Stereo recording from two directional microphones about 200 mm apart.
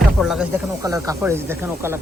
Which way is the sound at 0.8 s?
15° right (ahead or behind).